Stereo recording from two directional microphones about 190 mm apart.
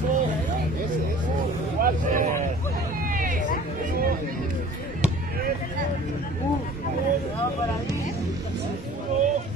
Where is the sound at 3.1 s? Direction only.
45° right (ahead or behind).